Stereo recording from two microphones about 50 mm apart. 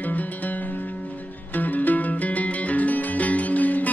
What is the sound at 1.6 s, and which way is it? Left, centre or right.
Music, left.